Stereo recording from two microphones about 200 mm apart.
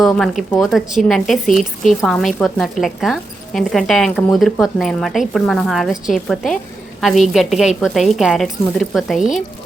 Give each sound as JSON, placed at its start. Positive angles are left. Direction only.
{"t": 0.0, "sound": "a woman's voice", "side_deg": 0}